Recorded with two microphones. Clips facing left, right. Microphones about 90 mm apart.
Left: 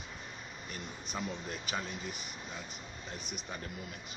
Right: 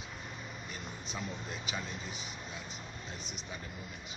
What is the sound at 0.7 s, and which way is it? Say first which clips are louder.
Speech: left 3 dB; 50° left (ahead or behind).